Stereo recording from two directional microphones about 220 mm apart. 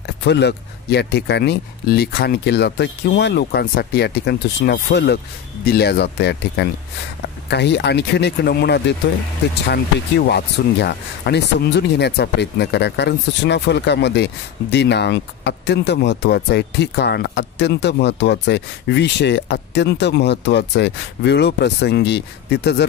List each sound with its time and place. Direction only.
0.2 s speech: 50° left (ahead or behind)